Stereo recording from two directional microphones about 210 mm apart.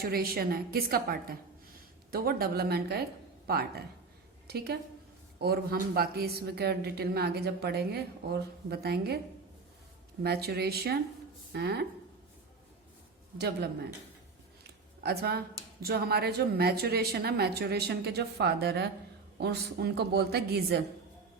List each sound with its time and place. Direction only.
0.0 s a woman's voice: 45° right (ahead or behind)
10.2 s speech: 50° right (ahead or behind)
15.0 s speech: 50° right (ahead or behind)